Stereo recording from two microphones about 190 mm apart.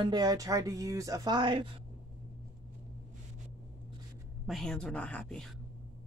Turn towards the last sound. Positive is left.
turn(degrees=5)  # may be behind; listen again after turning